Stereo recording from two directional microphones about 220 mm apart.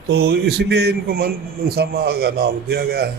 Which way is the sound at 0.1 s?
45° right (ahead or behind).